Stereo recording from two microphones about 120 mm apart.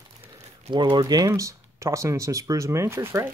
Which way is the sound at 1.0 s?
30° right (ahead or behind).